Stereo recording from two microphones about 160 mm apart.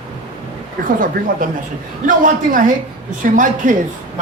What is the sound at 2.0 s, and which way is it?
Speech, 55° right (ahead or behind).